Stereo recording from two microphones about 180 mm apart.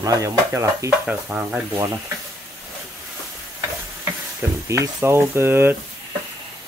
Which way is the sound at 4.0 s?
15° right (ahead or behind).